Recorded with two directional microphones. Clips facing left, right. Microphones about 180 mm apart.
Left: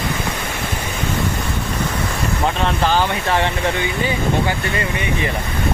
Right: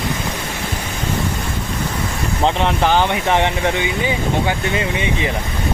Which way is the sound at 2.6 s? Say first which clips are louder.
Right 1 dB; 20° right (ahead or behind).